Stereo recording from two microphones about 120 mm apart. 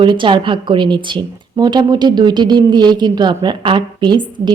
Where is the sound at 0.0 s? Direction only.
40° right (ahead or behind).